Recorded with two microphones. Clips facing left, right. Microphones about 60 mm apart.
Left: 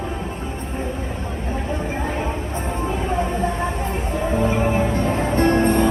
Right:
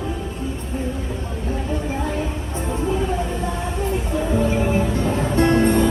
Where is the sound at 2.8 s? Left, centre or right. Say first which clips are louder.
Right 1 dB; left.